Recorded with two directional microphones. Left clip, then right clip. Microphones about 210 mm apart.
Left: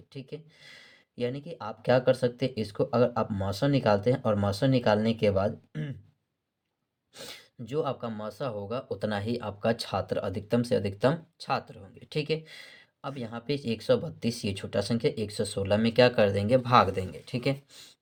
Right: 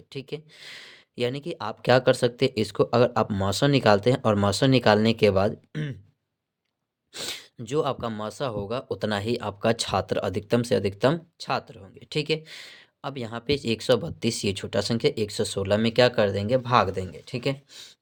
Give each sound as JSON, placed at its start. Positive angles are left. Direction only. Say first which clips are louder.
{"t": 0.1, "sound": "speech", "louder": "right 7 dB", "side_deg": -35}
{"t": 7.1, "sound": "speech", "louder": "right 10 dB", "side_deg": -40}